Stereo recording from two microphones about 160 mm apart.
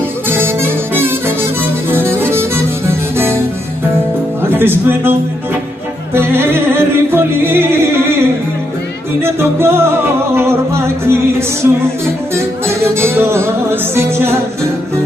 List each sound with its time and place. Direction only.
0.3 s music: 15° right (ahead or behind)
4.4 s speech: 15° right (ahead or behind)
6.1 s music: 15° right (ahead or behind)
9.2 s music: 15° right (ahead or behind)